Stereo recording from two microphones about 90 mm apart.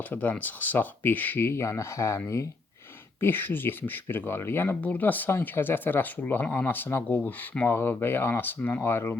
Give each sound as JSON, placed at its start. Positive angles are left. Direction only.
{"t": 0.1, "sound": "speech", "side_deg": 20}